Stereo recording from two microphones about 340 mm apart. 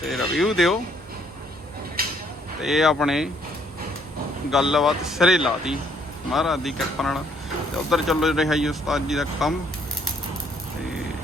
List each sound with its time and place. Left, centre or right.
0.0 s speech: centre
2.0 s a sound: right
2.6 s speech: centre
4.5 s speech: centre